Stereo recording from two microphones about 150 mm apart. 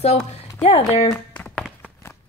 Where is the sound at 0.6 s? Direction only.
45° left (ahead or behind).